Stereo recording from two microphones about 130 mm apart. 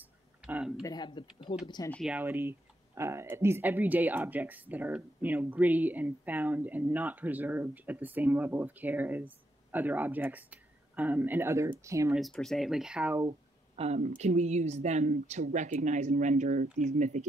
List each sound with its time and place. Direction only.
0.0 s a sound: 10° right (ahead or behind)
0.8 s speech: 35° left (ahead or behind)
2.2 s speech: 20° right (ahead or behind)
12.1 s speech: centre (ahead or behind)
13.3 s speech: 50° right (ahead or behind)